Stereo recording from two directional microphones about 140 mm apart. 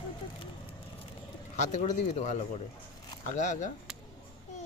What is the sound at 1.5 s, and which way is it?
Speech, 60° left (ahead or behind).